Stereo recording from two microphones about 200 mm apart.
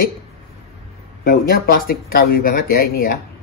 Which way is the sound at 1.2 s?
45° left (ahead or behind).